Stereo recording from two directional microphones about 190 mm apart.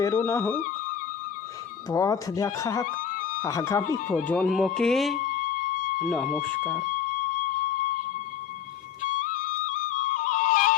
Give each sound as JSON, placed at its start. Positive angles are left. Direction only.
{"t": 0.0, "sound": "speech", "side_deg": 15}
{"t": 1.9, "sound": "speech", "side_deg": 20}
{"t": 2.8, "sound": "a sound", "side_deg": 45}
{"t": 3.4, "sound": "speech", "side_deg": 15}
{"t": 4.3, "sound": "speech", "side_deg": 5}
{"t": 5.3, "sound": "music", "side_deg": 45}
{"t": 6.0, "sound": "speech", "side_deg": 0}
{"t": 9.3, "sound": "music", "side_deg": 40}